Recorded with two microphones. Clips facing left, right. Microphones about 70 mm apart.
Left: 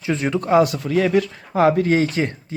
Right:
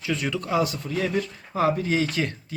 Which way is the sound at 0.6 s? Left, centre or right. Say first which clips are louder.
Left 8 dB; left.